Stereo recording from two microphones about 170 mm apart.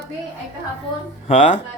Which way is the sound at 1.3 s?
45° left (ahead or behind).